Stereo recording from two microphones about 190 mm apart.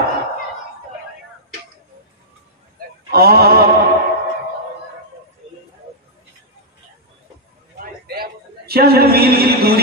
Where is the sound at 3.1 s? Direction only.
55° right (ahead or behind).